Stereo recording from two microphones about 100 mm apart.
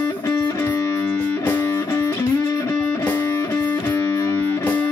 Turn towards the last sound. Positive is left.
turn(degrees=15)  # may be behind; listen again after turning